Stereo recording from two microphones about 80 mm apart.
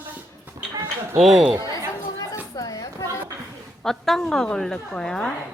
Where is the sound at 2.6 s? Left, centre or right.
Left.